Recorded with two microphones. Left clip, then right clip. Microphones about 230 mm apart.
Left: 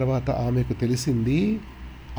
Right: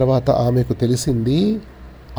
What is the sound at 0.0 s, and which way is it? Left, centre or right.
Speech, centre.